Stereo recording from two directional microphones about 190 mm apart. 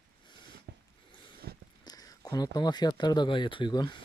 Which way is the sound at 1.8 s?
20° left (ahead or behind).